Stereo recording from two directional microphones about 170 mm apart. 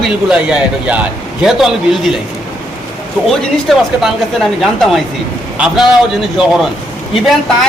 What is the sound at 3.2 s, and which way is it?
A woman's voice, centre (ahead or behind).